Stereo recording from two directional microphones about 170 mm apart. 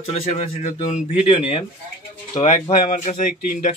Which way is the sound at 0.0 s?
35° left (ahead or behind).